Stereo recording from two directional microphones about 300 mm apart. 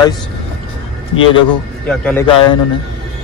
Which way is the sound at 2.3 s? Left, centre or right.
Centre.